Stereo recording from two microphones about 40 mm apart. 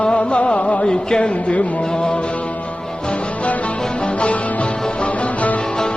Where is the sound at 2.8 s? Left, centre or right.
Centre.